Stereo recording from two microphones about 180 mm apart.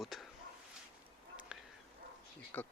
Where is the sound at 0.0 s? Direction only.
Centre (ahead or behind).